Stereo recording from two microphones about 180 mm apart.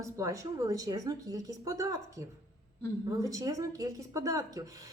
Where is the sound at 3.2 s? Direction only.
20° right (ahead or behind).